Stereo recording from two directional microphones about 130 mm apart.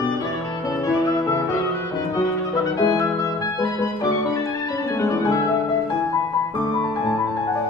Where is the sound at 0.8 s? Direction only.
25° left (ahead or behind).